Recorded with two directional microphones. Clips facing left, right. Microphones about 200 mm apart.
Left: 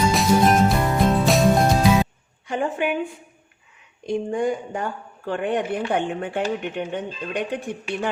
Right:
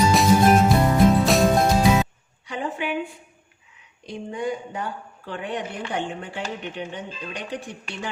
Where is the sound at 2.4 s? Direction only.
50° left (ahead or behind).